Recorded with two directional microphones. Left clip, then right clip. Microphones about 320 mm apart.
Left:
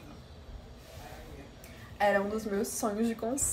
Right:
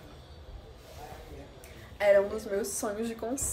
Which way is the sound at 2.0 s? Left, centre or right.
Centre.